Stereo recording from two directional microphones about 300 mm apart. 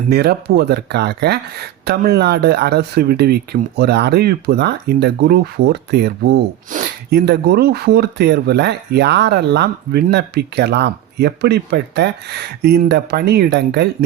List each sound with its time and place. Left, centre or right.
0.1 s speech: right